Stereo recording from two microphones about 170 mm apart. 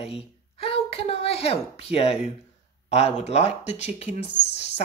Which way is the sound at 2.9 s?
40° left (ahead or behind).